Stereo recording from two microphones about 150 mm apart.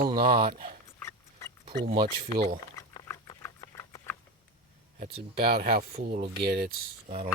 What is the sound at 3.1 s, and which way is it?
Patter, 20° left (ahead or behind).